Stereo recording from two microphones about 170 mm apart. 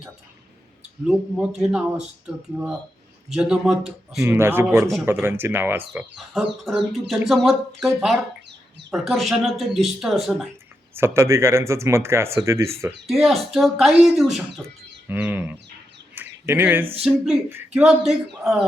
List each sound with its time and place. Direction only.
1.0 s speech: 5° right (ahead or behind)
4.2 s speech: 15° right (ahead or behind)
10.9 s speech: 15° right (ahead or behind)
13.2 s speech: centre (ahead or behind)
15.0 s speech: 10° right (ahead or behind)
16.1 s bird: 10° right (ahead or behind)
17.0 s speech: 5° right (ahead or behind)